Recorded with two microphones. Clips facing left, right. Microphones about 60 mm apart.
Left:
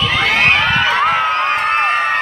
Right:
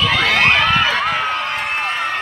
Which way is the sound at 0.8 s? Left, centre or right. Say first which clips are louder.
Left 4 dB; left.